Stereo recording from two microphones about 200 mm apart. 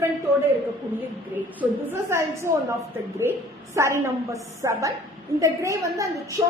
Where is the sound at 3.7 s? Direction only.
15° right (ahead or behind).